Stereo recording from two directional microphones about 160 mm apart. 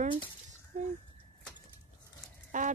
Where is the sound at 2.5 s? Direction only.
50° right (ahead or behind).